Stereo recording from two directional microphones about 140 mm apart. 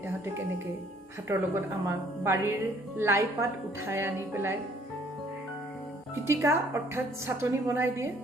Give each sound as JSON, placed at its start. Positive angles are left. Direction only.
{"t": 1.3, "sound": "a woman's voice", "side_deg": -15}
{"t": 6.2, "sound": "a woman's voice", "side_deg": -20}